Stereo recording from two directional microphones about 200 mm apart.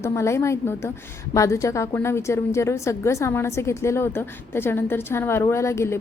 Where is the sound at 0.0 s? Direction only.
15° left (ahead or behind).